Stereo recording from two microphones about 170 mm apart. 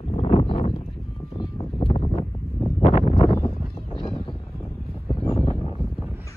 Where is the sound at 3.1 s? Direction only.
20° left (ahead or behind).